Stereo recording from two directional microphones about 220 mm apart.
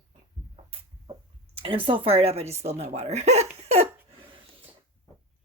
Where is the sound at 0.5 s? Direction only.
25° right (ahead or behind).